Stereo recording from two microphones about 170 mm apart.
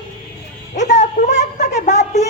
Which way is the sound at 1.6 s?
45° left (ahead or behind).